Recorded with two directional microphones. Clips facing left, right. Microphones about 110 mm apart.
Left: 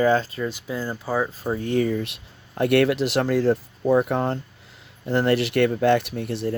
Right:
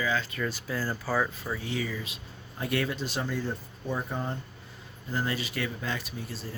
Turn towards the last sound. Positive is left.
turn(degrees=70)  # may be behind; listen again after turning